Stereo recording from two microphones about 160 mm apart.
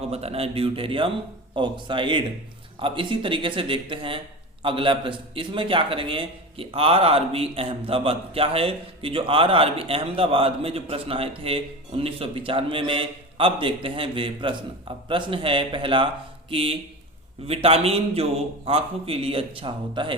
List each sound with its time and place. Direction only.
0.1 s a man's voice: 40° right (ahead or behind)